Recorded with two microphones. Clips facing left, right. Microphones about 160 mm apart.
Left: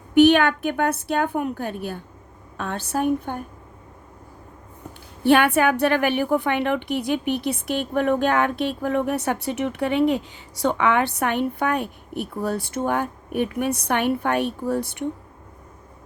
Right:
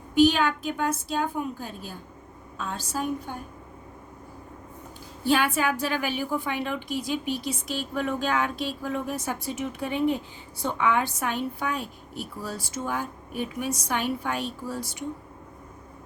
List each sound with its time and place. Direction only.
0.1 s a woman's voice: 65° left (ahead or behind)
5.2 s a woman's voice: 65° left (ahead or behind)